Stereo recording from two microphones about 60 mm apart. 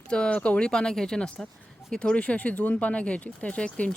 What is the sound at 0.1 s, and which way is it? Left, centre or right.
Speech, centre.